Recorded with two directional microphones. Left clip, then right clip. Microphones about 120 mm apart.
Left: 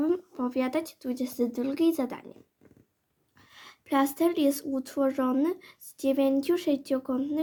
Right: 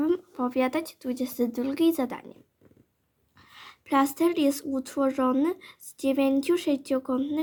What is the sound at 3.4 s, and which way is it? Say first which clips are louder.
Speech: right 3 dB; 25° right (ahead or behind).